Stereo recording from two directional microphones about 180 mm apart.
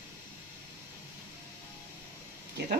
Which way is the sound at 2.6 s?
70° right (ahead or behind).